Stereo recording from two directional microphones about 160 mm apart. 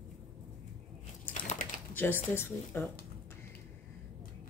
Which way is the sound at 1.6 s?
55° left (ahead or behind).